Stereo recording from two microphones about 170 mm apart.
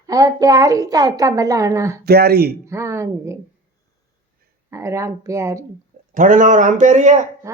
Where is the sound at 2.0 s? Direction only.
65° right (ahead or behind).